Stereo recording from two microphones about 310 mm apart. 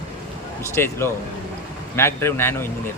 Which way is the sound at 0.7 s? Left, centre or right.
Centre.